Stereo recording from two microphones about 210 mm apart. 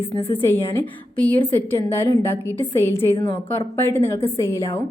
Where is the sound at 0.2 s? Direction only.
25° left (ahead or behind).